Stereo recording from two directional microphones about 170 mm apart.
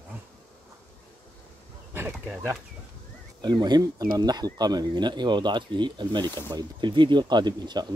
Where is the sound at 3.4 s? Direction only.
25° right (ahead or behind).